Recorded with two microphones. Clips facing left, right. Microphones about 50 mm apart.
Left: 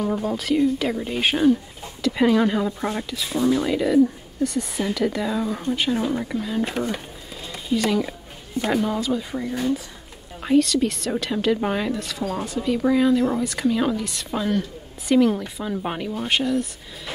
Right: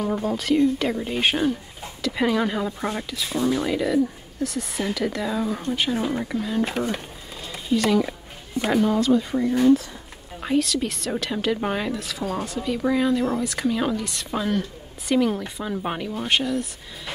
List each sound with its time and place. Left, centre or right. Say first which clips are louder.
0.0 s a woman's voice: left 1 dB; centre